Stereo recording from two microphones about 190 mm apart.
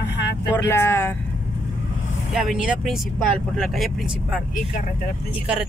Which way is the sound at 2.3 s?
5° right (ahead or behind).